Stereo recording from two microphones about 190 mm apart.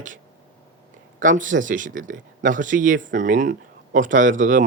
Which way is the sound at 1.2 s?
45° right (ahead or behind).